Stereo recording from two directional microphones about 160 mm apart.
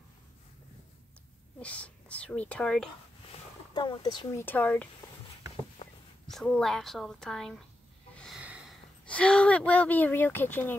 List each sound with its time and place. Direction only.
1.6 s speech: 10° left (ahead or behind)
3.3 s a sound: 30° left (ahead or behind)
4.4 s speech: 10° left (ahead or behind)
5.8 s a sound: 35° left (ahead or behind)
6.2 s a woman's voice: 5° left (ahead or behind)
8.4 s snort: 5° right (ahead or behind)
9.0 s speech: 5° left (ahead or behind)